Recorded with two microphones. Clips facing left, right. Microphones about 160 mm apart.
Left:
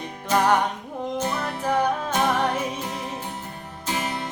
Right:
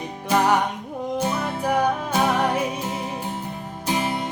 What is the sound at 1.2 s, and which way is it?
Music, 10° right (ahead or behind).